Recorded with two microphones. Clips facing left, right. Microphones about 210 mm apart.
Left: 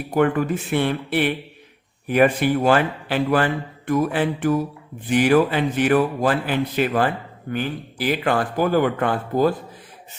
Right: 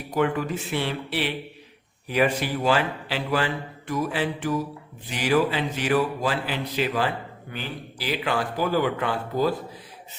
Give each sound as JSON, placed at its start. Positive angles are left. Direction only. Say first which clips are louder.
{"t": 0.1, "sound": "a man's voice", "louder": "left 5 dB", "side_deg": 55}